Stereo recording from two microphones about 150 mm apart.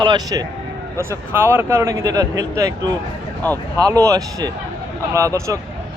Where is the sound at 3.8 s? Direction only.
20° right (ahead or behind).